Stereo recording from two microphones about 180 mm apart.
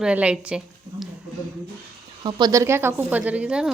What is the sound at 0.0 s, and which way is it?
A woman's voice, 5° right (ahead or behind).